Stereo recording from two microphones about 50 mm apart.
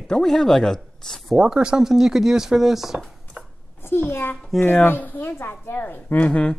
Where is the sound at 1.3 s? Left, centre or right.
Centre.